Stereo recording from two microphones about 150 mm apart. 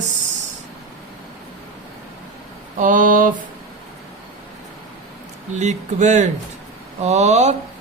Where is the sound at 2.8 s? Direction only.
65° right (ahead or behind).